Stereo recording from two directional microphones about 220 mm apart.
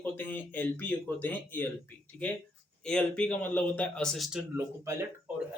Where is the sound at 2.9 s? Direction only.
5° left (ahead or behind).